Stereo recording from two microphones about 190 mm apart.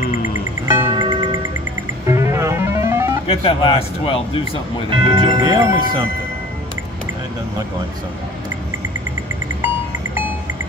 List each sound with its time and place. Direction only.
0.7 s music: 25° right (ahead or behind)
3.3 s a man's voice: 30° left (ahead or behind)
4.8 s speech: 25° right (ahead or behind)